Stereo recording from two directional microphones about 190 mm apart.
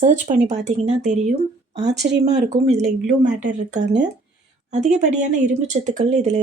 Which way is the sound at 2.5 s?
35° right (ahead or behind).